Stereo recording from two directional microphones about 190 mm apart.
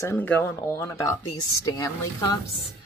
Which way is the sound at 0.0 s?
10° left (ahead or behind).